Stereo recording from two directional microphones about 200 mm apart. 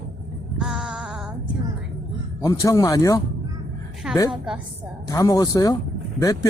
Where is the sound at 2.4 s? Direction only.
15° left (ahead or behind).